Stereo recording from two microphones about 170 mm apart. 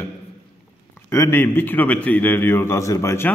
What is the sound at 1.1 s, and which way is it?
A man's voice, 15° left (ahead or behind).